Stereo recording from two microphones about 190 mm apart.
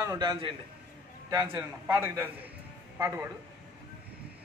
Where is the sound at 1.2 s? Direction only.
15° right (ahead or behind).